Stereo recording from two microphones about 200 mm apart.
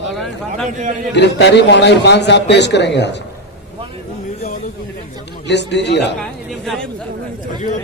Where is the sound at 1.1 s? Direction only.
60° left (ahead or behind).